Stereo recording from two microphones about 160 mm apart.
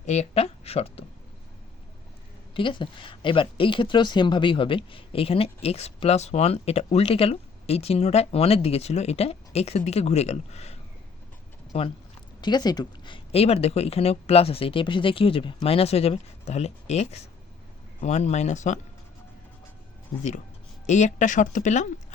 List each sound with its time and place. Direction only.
0.0 s speech: 45° left (ahead or behind)
2.6 s speech: 30° left (ahead or behind)
12.4 s speech: 25° left (ahead or behind); by 18.8 s 50° left (ahead or behind)
20.8 s speech: 45° left (ahead or behind)